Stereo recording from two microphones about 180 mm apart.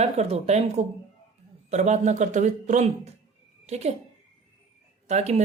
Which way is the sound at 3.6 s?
40° right (ahead or behind).